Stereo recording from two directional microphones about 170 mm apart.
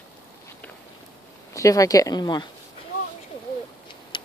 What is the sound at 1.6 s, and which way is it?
Speech, 20° left (ahead or behind).